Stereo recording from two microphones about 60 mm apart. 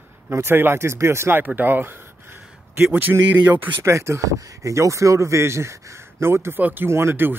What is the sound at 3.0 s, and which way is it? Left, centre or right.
Speech, right.